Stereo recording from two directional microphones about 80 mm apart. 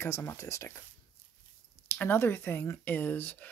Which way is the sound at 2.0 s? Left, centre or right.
Left.